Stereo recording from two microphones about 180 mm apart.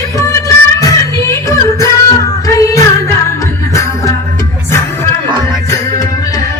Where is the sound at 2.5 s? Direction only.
15° left (ahead or behind).